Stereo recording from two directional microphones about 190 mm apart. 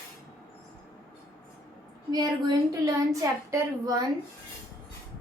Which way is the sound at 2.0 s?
20° right (ahead or behind).